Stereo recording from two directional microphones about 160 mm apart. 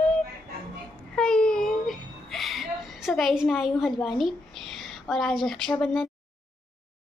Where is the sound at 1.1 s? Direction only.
5° left (ahead or behind).